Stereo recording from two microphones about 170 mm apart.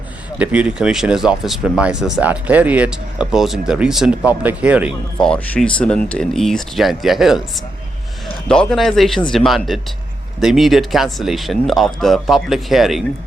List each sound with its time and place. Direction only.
0.3 s speech: 10° right (ahead or behind)
5.2 s speech: 5° left (ahead or behind)
8.4 s speech: centre (ahead or behind)